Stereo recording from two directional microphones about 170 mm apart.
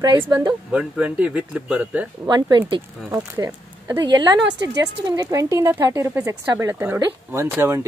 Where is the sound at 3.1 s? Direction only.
20° right (ahead or behind).